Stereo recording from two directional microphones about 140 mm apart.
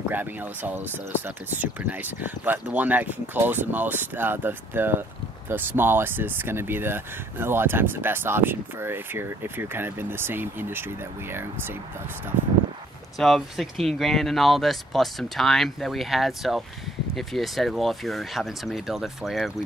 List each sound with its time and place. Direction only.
0.1 s speech: 15° right (ahead or behind)
13.2 s speech: centre (ahead or behind)